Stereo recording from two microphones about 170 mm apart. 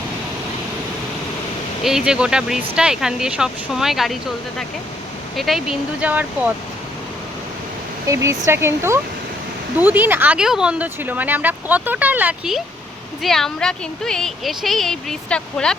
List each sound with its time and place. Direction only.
1.8 s speech: 5° right (ahead or behind)
8.0 s speech: 20° right (ahead or behind); by 15.7 s 5° left (ahead or behind)